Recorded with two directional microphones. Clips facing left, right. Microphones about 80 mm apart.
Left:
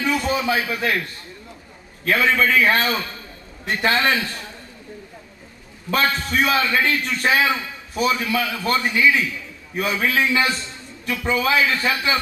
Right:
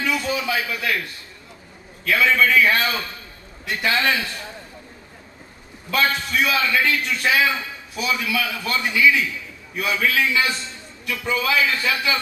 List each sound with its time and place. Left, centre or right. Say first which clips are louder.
0.0 s a sound: left 2 dB; left
2.0 s a man's voice: even; left
5.9 s a man's voice: left 1 dB; left